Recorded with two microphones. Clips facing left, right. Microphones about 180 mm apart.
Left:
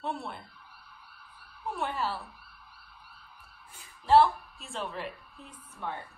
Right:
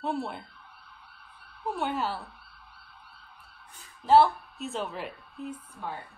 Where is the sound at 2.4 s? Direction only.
30° right (ahead or behind).